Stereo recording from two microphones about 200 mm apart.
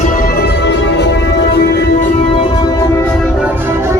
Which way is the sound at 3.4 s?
10° right (ahead or behind).